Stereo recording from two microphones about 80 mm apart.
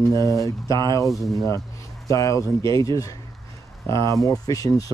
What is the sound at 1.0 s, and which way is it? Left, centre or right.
Speech, centre.